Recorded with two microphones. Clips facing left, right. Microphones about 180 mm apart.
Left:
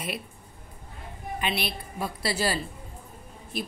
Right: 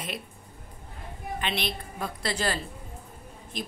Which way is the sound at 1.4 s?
10° left (ahead or behind).